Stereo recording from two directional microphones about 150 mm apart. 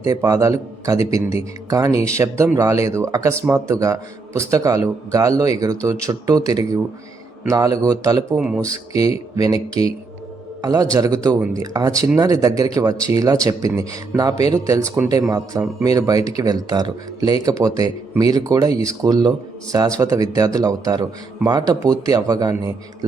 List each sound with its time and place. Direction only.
0.0 s speech: 20° right (ahead or behind)
8.4 s speech: 5° right (ahead or behind)
9.0 s speech: 20° right (ahead or behind)